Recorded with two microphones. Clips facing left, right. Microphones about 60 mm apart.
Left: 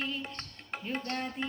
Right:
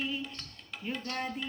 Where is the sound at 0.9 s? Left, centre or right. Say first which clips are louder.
Left 3 dB; left.